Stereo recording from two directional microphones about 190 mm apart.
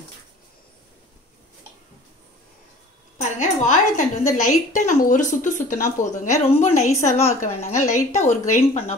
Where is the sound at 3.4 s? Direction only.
40° left (ahead or behind).